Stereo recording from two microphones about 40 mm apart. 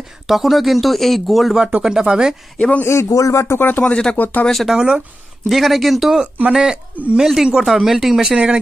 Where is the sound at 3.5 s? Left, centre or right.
Left.